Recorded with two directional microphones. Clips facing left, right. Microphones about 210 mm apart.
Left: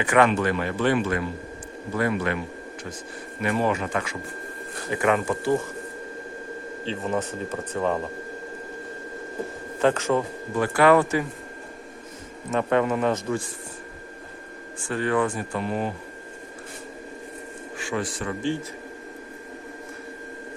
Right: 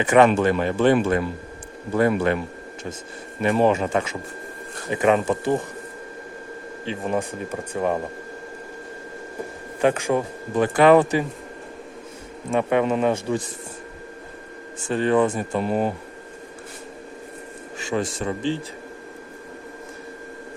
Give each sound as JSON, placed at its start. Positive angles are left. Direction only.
{"t": 0.0, "sound": "speech", "side_deg": -20}
{"t": 2.0, "sound": "speech", "side_deg": -30}
{"t": 3.4, "sound": "speech", "side_deg": -25}
{"t": 6.8, "sound": "speech", "side_deg": -15}
{"t": 9.8, "sound": "speech", "side_deg": -15}
{"t": 12.5, "sound": "speech", "side_deg": -15}
{"t": 14.8, "sound": "speech", "side_deg": -25}
{"t": 15.6, "sound": "speech", "side_deg": -40}
{"t": 17.8, "sound": "speech", "side_deg": -25}